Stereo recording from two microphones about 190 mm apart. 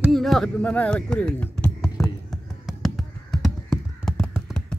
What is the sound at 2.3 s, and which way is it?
Crow, centre (ahead or behind).